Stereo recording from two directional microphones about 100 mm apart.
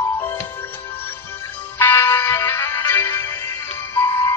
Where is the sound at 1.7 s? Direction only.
25° left (ahead or behind).